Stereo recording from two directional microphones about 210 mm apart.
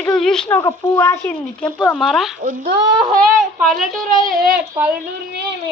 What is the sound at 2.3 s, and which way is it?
Speech, 35° right (ahead or behind).